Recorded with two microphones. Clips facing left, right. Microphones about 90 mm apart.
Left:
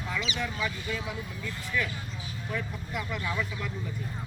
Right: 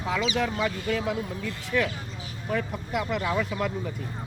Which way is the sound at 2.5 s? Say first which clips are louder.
Right 7 dB; 60° right (ahead or behind).